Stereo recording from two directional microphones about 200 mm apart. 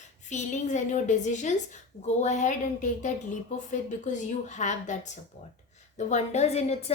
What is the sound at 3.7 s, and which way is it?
A woman's voice, 35° left (ahead or behind).